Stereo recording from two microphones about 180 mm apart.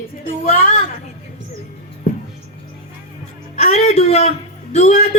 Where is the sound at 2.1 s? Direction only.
45° left (ahead or behind).